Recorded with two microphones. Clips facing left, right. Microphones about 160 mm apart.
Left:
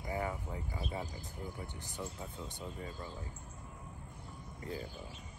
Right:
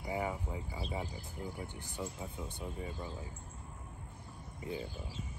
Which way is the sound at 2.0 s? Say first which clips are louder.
Right 2 dB; 15° right (ahead or behind).